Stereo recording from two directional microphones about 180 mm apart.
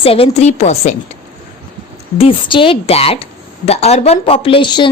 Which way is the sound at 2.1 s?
30° left (ahead or behind).